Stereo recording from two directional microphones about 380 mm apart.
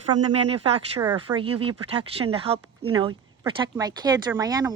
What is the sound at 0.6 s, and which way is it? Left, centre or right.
Speech, centre.